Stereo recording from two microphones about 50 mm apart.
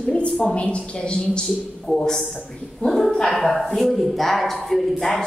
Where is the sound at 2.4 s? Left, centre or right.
Centre.